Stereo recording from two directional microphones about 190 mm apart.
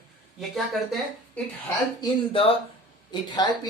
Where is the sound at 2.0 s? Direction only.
30° left (ahead or behind).